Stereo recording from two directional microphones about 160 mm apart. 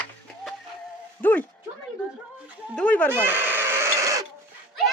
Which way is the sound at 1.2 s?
10° left (ahead or behind).